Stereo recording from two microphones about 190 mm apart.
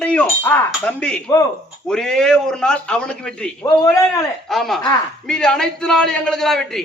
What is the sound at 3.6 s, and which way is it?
Speech, 20° left (ahead or behind).